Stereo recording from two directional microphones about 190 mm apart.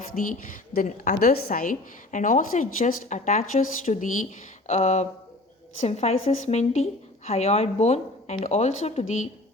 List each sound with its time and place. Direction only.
0.0 s a woman's voice: 45° left (ahead or behind)